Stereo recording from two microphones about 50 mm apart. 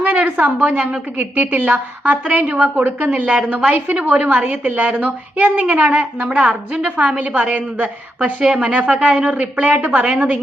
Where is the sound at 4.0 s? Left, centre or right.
Right.